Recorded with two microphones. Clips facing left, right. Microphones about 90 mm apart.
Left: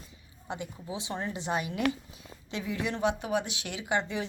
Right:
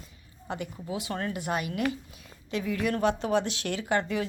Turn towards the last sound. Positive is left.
turn(degrees=20)  # may be behind; listen again after turning